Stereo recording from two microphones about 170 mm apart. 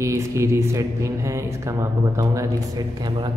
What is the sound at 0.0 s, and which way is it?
Speech, 15° right (ahead or behind).